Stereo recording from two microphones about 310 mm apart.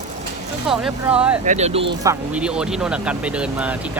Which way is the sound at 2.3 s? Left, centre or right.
Centre.